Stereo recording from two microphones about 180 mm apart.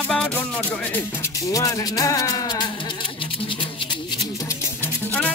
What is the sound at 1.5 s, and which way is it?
Speech, 20° left (ahead or behind).